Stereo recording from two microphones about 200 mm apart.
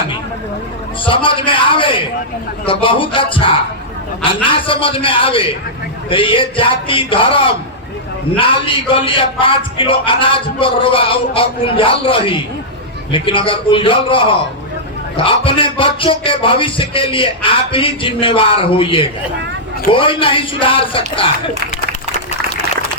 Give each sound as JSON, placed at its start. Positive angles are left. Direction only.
{"t": 1.0, "sound": "a man's voice", "side_deg": 25}